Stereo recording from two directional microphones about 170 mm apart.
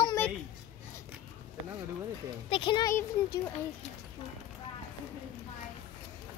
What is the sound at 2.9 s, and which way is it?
Speech, 15° left (ahead or behind).